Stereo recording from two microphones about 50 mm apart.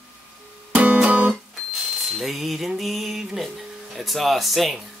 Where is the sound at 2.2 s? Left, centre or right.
Centre.